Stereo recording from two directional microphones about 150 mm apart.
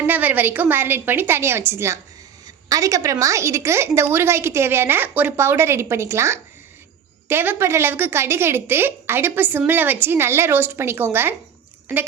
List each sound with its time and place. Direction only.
0.0 s a woman's voice: 10° right (ahead or behind)